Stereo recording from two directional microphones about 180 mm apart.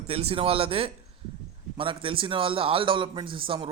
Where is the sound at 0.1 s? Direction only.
35° right (ahead or behind).